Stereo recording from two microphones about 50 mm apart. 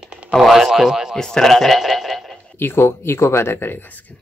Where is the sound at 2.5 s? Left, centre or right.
Left.